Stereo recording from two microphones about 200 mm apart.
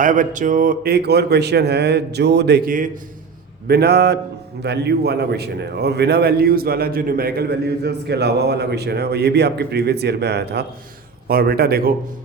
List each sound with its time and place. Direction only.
0.0 s a man's voice: 40° right (ahead or behind)
3.7 s a man's voice: 55° right (ahead or behind)